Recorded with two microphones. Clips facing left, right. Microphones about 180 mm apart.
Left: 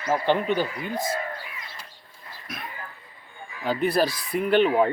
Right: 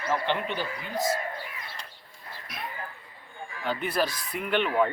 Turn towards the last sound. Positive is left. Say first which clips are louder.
# left 6 dB
turn(degrees=35)  # may be behind; listen again after turning